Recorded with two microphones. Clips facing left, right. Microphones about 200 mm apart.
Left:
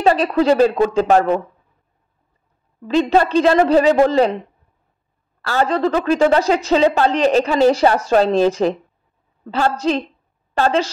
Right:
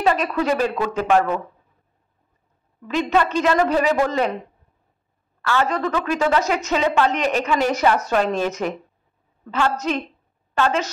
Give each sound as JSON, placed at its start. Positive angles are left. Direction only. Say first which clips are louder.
{"t": 0.0, "sound": "a woman's voice", "louder": "left 5 dB", "side_deg": 30}
{"t": 2.8, "sound": "a woman's voice", "louder": "left 5 dB", "side_deg": 30}
{"t": 5.4, "sound": "a woman's voice", "louder": "left 4 dB", "side_deg": 35}